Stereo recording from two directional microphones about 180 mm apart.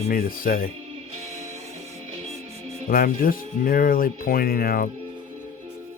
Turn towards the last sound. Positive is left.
turn(degrees=55)  # may be behind; listen again after turning